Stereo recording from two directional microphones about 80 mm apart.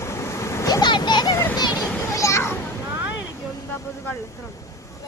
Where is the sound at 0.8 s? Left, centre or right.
Left.